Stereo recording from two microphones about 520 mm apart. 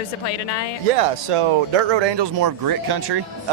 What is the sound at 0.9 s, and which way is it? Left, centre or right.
A man's voice, right.